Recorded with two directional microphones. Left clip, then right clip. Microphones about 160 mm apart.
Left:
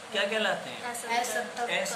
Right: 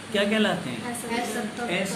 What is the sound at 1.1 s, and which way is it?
Speech, 65° left (ahead or behind).